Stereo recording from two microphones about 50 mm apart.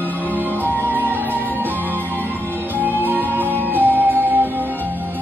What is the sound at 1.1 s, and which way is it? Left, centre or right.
Music, right.